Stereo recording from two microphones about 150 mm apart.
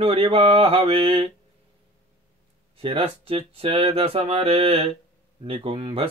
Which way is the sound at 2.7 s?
40° right (ahead or behind).